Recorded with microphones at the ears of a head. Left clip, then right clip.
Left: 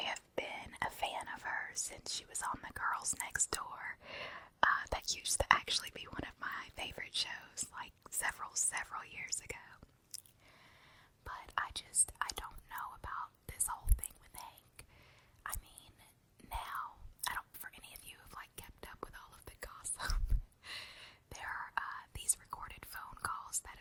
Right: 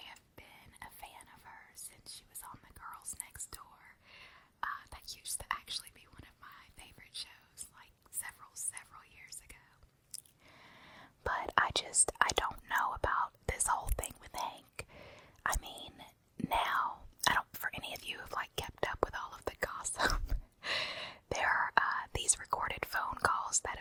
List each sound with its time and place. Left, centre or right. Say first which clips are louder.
0.0 s whispering: left 13 dB; left
10.9 s whispering: right 12 dB; right